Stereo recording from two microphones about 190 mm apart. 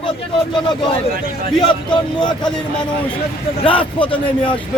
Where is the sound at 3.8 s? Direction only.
25° left (ahead or behind).